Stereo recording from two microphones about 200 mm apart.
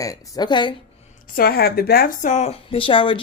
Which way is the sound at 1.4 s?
50° left (ahead or behind).